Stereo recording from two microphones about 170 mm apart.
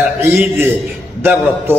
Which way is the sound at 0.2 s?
15° right (ahead or behind).